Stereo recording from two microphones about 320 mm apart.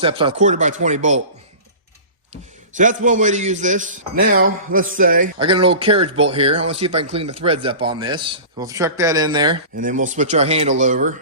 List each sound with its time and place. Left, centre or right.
0.0 s a man's voice: centre
2.3 s a man's voice: right
9.7 s a man's voice: right